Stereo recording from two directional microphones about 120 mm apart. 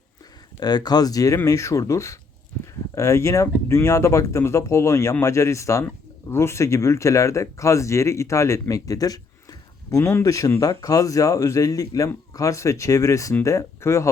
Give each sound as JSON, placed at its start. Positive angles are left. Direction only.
{"t": 0.6, "sound": "speech", "side_deg": 35}